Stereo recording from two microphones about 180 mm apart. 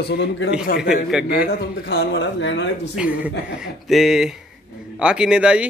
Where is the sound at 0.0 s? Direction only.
70° left (ahead or behind).